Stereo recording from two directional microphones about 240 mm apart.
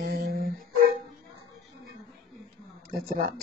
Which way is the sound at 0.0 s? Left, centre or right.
Right.